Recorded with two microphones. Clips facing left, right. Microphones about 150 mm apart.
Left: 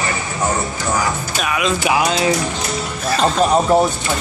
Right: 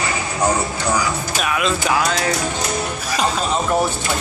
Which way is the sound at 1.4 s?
Centre (ahead or behind).